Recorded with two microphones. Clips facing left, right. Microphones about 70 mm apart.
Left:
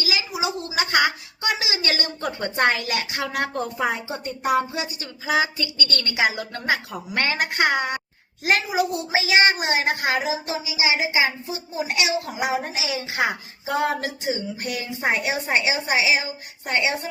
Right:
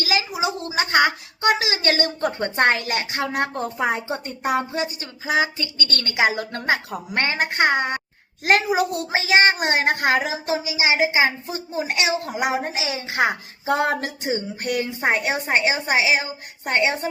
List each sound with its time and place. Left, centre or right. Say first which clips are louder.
0.0 s a sound: right 4 dB; right
0.3 s a woman's voice: right 2 dB; right
3.9 s a child's voice: right 2 dB; right
8.4 s a child's voice: right 3 dB; right